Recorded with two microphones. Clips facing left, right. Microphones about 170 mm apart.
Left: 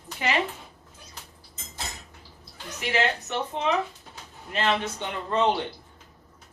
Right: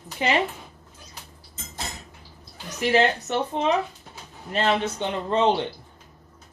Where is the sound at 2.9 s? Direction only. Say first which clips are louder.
Right 5 dB; 35° right (ahead or behind).